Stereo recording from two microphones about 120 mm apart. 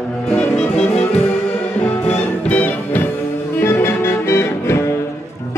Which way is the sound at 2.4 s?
15° left (ahead or behind).